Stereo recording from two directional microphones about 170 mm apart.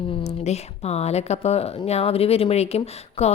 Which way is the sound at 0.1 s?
35° left (ahead or behind).